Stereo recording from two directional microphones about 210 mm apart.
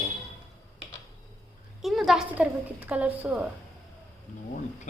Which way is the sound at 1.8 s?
Centre (ahead or behind).